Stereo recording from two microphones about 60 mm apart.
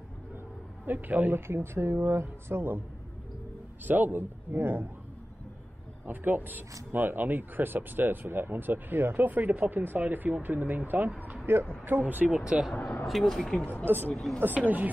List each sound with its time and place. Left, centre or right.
0.8 s speech: right
1.5 s speech: right
3.8 s speech: right
6.0 s speech: right
11.5 s speech: right
12.4 s speech: centre
13.0 s speech: centre
13.6 s speech: left
14.4 s speech: right